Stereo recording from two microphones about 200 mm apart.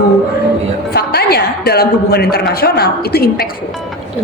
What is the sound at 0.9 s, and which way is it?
Speech, 55° left (ahead or behind).